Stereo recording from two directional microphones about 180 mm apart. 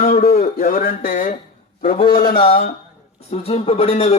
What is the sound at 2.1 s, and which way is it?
Speech, 60° left (ahead or behind).